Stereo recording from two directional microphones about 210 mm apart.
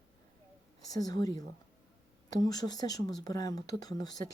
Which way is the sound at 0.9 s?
20° left (ahead or behind).